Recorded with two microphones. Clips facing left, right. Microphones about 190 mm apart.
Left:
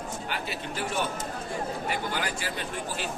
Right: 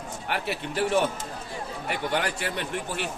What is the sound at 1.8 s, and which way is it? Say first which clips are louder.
A man's voice: right 3 dB; 65° right (ahead or behind).